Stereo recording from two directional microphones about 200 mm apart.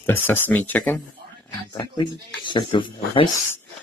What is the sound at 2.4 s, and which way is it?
Speech, 25° left (ahead or behind).